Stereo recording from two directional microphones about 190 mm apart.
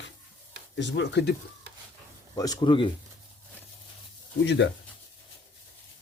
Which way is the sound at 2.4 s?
20° left (ahead or behind).